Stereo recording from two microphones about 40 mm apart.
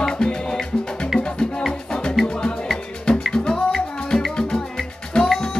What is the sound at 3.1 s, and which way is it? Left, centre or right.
Music, left.